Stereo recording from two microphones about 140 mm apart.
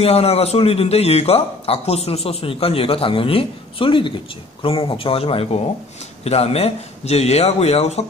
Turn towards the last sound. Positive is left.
turn(degrees=50)  # may be behind; listen again after turning